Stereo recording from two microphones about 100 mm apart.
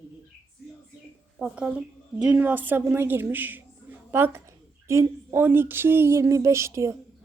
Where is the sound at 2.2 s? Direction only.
15° right (ahead or behind).